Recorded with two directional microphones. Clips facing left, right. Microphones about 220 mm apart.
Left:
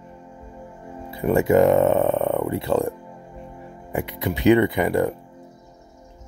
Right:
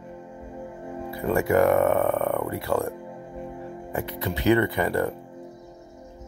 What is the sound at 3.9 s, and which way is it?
Speech, 15° left (ahead or behind).